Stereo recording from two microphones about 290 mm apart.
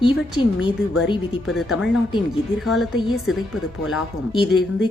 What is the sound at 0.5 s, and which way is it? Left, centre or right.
Speech, left.